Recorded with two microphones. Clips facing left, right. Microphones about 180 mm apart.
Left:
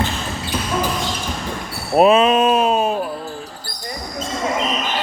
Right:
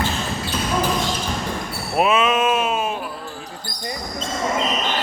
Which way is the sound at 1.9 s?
35° left (ahead or behind).